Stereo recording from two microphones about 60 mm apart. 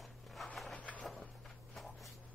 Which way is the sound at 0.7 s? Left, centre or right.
Left.